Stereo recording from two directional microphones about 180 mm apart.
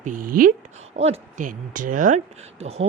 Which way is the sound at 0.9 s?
35° right (ahead or behind).